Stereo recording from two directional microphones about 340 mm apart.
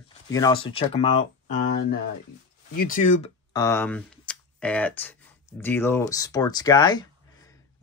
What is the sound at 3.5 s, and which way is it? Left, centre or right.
Speech, centre.